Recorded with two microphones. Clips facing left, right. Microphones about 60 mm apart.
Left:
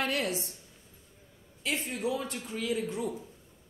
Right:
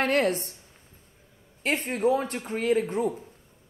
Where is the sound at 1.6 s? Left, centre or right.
Right.